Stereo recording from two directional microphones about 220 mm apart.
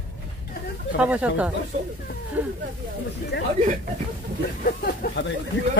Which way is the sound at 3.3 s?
50° left (ahead or behind).